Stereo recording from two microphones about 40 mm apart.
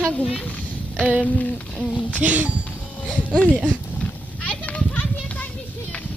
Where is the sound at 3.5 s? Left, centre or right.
Right.